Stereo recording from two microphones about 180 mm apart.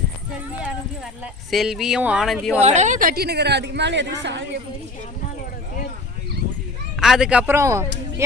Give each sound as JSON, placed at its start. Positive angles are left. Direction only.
{"t": 1.2, "sound": "speech", "side_deg": 0}
{"t": 2.6, "sound": "a woman's voice", "side_deg": -40}
{"t": 7.0, "sound": "a man's voice", "side_deg": 0}